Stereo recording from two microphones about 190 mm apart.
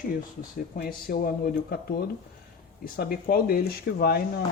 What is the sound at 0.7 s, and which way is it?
Speech, 55° left (ahead or behind).